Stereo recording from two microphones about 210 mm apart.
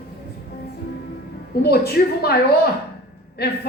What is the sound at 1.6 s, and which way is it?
Speech, 50° left (ahead or behind).